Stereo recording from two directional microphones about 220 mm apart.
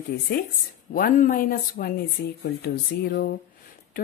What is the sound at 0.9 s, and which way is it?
Speech, 40° left (ahead or behind).